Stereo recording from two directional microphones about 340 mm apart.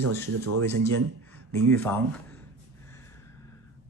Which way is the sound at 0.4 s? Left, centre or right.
Right.